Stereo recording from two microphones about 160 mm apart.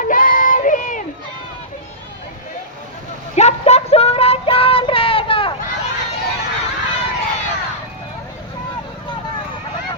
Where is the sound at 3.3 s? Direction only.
45° left (ahead or behind).